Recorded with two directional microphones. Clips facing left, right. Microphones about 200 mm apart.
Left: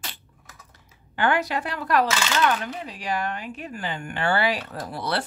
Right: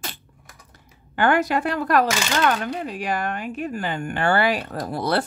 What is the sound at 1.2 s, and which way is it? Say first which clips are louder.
Speech: right 4 dB; 50° right (ahead or behind).